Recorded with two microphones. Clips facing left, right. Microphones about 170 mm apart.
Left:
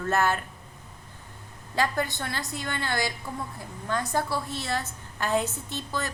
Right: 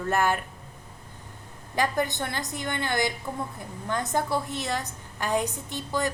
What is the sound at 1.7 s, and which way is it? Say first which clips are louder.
A woman's voice: right 1 dB; 15° right (ahead or behind).